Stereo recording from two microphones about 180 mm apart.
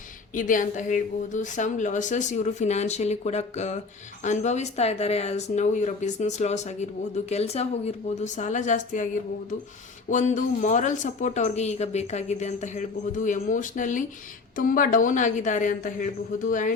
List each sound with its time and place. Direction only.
0.3 s speech: 45° left (ahead or behind)
10.1 s speech: 45° left (ahead or behind)